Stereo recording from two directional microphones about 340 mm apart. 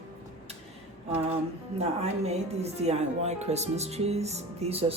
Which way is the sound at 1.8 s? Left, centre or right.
Centre.